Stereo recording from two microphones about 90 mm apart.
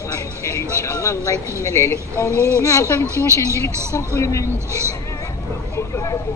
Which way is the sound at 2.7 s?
35° left (ahead or behind).